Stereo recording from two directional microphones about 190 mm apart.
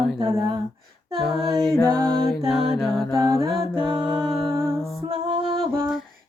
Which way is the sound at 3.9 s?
25° right (ahead or behind).